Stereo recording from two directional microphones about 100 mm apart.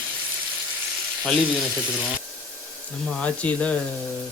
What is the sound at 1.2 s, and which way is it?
Speech, 5° left (ahead or behind).